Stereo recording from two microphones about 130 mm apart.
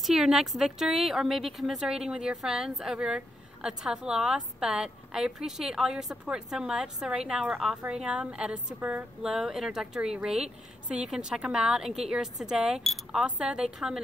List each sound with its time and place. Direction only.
0.0 s a woman's voice: 5° right (ahead or behind)